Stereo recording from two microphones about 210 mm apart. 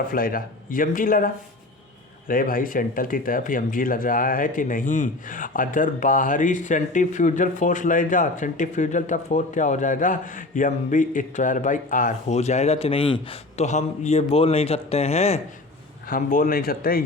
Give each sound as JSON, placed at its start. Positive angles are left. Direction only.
{"t": 0.1, "sound": "speech", "side_deg": 45}
{"t": 16.0, "sound": "speech", "side_deg": 40}